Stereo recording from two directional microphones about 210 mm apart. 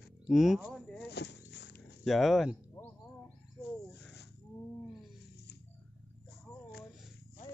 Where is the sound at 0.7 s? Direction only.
Centre (ahead or behind).